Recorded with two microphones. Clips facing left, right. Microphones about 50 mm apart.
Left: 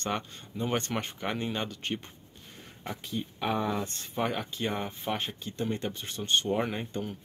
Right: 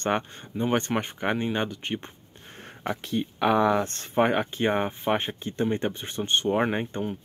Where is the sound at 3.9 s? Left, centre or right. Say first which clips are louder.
Right 8 dB; right.